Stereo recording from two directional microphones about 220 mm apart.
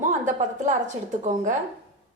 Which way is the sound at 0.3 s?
35° right (ahead or behind).